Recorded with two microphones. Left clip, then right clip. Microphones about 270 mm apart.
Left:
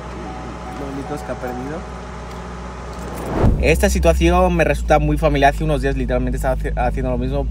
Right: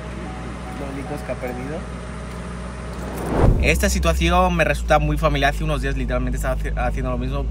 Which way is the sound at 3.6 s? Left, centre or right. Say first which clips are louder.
Left 4 dB; centre.